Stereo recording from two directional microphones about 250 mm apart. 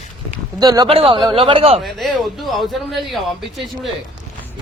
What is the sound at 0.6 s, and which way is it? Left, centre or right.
Speech, centre.